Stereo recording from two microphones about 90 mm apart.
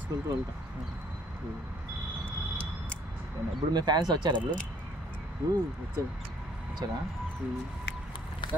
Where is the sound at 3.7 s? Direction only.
50° right (ahead or behind).